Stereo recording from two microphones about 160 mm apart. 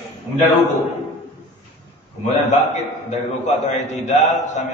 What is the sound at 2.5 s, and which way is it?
A man's voice, 45° left (ahead or behind).